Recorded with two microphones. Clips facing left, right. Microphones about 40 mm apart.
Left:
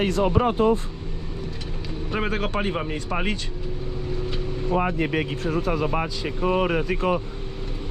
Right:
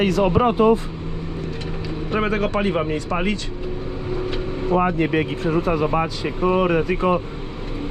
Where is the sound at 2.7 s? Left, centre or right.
Centre.